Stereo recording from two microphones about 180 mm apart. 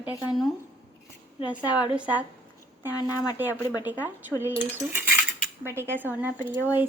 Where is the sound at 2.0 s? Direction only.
10° right (ahead or behind).